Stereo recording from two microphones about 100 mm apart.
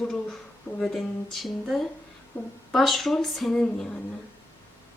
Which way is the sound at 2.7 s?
Centre (ahead or behind).